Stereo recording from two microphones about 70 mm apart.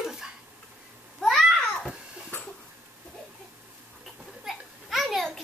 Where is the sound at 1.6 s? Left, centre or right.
Centre.